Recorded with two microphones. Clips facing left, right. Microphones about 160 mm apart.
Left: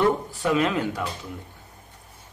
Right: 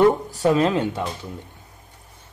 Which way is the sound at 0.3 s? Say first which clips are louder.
Right 4 dB; 35° right (ahead or behind).